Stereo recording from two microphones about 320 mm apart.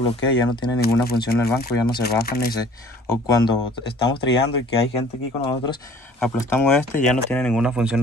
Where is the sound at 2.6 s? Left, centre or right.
Centre.